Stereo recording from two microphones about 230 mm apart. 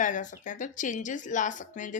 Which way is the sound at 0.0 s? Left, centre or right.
Left.